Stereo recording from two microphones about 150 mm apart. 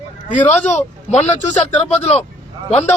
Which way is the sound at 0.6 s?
50° left (ahead or behind).